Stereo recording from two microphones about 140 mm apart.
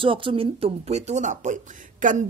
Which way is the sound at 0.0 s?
40° right (ahead or behind).